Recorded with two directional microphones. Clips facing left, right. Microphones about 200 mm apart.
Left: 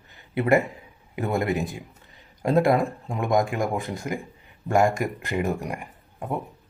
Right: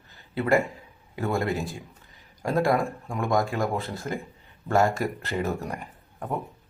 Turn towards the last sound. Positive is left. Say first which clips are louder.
# left 1 dB
turn(degrees=10)  # may be behind; listen again after turning